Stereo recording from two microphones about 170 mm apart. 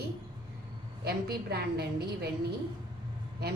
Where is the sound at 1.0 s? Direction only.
70° right (ahead or behind).